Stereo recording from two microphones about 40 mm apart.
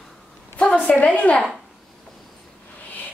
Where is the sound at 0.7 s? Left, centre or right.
Left.